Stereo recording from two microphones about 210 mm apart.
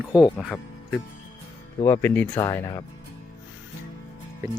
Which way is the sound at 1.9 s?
10° left (ahead or behind).